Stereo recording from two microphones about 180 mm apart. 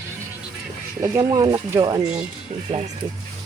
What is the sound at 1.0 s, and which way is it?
Speech, 15° right (ahead or behind).